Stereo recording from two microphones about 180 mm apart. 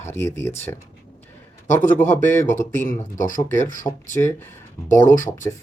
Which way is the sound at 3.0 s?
45° left (ahead or behind).